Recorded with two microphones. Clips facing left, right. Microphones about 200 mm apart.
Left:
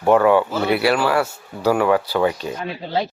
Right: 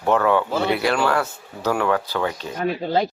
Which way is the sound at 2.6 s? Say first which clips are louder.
Right 6 dB; 50° right (ahead or behind).